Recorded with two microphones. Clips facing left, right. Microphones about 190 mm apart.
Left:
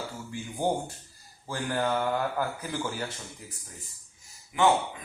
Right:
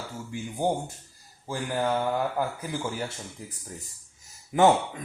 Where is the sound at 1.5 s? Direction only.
15° right (ahead or behind).